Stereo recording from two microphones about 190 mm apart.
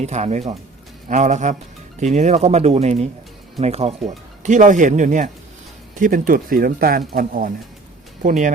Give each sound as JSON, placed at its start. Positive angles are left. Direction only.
{"t": 0.0, "sound": "speech", "side_deg": -35}